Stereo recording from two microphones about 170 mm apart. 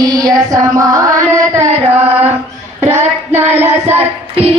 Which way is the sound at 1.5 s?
40° right (ahead or behind).